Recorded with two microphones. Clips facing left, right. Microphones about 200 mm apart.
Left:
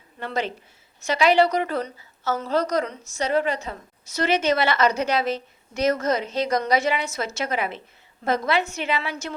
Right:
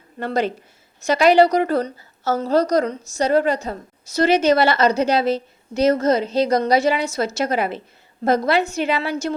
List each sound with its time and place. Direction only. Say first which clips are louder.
0.2 s a woman's voice: right 6 dB; 40° right (ahead or behind)